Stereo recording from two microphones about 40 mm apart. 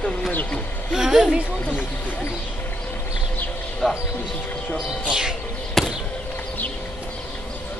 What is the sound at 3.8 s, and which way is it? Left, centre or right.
Speech, centre.